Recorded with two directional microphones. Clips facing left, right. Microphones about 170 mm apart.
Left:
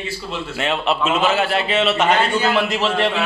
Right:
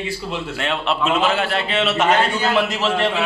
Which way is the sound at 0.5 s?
5° left (ahead or behind).